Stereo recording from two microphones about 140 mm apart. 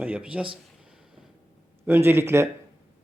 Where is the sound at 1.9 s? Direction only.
15° right (ahead or behind).